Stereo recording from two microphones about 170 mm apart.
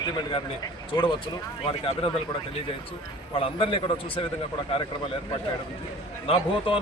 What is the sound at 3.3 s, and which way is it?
Speech, 30° left (ahead or behind).